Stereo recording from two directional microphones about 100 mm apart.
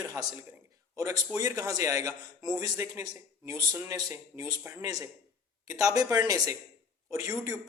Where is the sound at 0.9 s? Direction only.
40° right (ahead or behind).